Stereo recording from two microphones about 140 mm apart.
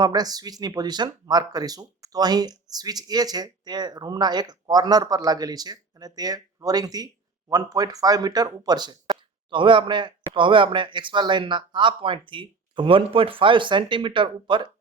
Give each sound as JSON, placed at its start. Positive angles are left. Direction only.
{"t": 0.0, "sound": "speech", "side_deg": -30}